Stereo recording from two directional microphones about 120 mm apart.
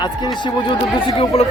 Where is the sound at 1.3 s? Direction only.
55° left (ahead or behind).